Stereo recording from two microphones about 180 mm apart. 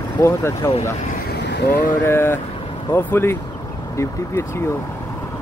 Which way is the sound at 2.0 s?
15° left (ahead or behind).